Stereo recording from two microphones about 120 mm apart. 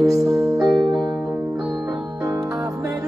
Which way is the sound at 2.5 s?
30° right (ahead or behind).